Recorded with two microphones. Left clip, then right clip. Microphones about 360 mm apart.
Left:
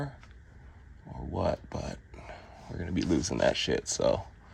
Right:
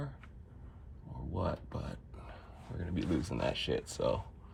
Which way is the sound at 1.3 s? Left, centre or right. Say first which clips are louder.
Left 7 dB; left.